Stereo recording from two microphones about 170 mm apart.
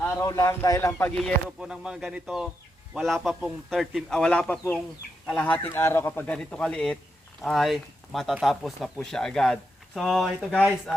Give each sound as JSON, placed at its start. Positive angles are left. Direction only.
{"t": 0.2, "sound": "speech", "side_deg": 20}
{"t": 1.5, "sound": "speech", "side_deg": -5}